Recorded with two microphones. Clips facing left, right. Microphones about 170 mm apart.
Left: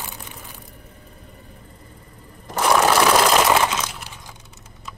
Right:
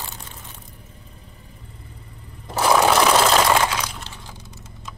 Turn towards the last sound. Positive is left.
turn(degrees=15)  # may be behind; listen again after turning